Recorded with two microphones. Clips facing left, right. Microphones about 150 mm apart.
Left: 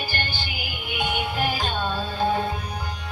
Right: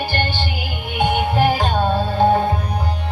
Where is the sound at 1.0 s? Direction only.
60° right (ahead or behind).